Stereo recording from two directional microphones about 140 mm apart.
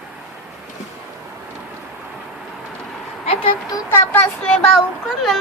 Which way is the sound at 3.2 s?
45° left (ahead or behind).